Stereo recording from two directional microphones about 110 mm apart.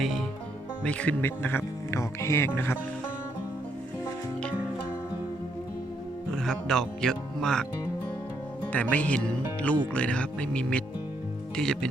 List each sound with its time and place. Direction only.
0.9 s speech: 10° left (ahead or behind)
6.3 s speech: 5° left (ahead or behind)
8.7 s speech: 15° left (ahead or behind)